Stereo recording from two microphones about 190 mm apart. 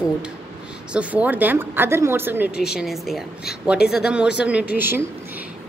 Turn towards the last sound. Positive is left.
turn(degrees=-10)  # may be behind; listen again after turning